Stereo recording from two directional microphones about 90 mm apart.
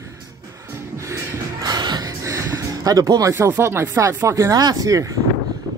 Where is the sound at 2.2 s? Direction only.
35° right (ahead or behind).